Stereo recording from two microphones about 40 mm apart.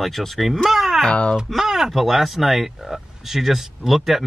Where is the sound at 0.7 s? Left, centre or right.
Centre.